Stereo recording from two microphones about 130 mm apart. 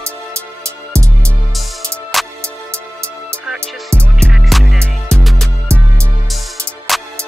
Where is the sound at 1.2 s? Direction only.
Centre (ahead or behind).